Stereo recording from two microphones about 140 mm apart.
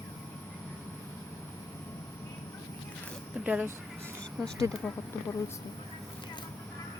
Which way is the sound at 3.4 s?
10° right (ahead or behind).